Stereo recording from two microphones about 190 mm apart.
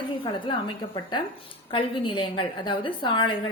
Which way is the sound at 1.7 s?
25° left (ahead or behind).